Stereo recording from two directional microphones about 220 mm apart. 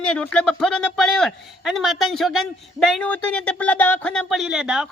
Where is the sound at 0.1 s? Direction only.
5° left (ahead or behind).